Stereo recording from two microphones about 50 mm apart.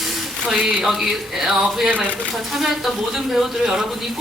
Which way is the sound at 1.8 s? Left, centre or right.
Right.